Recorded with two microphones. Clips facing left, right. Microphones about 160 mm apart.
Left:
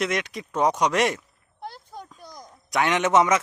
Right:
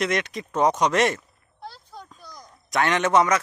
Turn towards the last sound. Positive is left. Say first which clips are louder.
# even
turn(degrees=20)  # may be behind; listen again after turning